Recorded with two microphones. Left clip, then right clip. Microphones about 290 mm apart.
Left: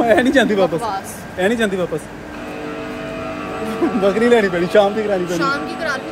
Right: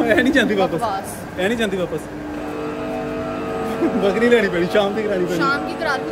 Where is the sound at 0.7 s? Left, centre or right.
Centre.